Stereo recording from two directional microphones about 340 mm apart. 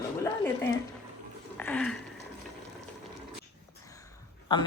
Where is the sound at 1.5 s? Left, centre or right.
Centre.